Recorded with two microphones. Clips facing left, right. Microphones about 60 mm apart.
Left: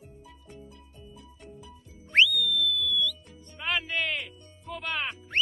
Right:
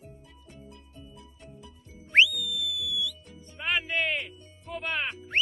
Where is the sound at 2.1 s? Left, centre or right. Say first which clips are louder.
Even; centre.